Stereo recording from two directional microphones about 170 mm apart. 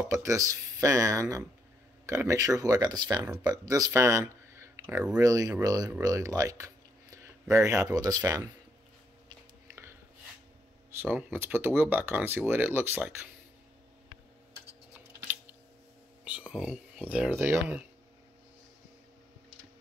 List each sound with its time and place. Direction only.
0.1 s speech: 15° right (ahead or behind)
11.0 s speech: 10° right (ahead or behind)
16.3 s speech: 5° right (ahead or behind)